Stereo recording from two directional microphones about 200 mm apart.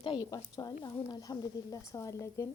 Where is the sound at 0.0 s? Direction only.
20° left (ahead or behind).